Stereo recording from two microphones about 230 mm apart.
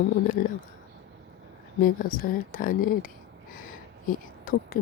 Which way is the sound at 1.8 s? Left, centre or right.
Left.